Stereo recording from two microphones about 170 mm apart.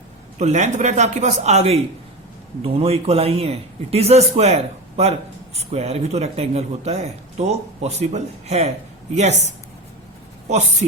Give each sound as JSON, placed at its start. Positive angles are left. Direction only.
{"t": 0.3, "sound": "a man's voice", "side_deg": -45}